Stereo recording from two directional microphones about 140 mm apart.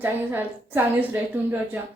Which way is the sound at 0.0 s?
15° right (ahead or behind).